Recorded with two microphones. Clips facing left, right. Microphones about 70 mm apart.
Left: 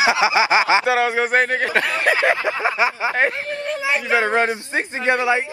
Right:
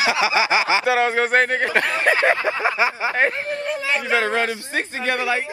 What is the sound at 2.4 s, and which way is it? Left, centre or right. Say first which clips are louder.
Speech: left 1 dB; centre.